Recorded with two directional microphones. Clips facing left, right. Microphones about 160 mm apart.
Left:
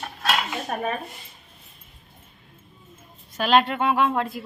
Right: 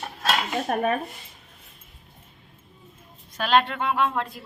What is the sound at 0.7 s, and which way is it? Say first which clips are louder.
Speech: right 4 dB; 55° right (ahead or behind).